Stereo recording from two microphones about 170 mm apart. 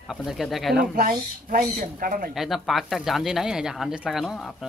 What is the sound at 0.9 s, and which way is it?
Speech, 55° right (ahead or behind).